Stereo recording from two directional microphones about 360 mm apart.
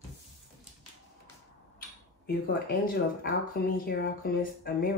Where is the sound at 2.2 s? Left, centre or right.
Left.